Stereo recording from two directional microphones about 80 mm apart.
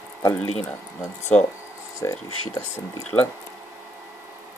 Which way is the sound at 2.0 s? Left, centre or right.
Left.